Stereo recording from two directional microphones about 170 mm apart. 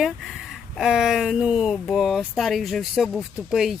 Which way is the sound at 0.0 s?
Centre (ahead or behind).